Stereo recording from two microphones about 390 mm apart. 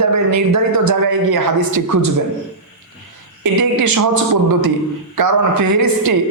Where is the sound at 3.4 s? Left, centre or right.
Right.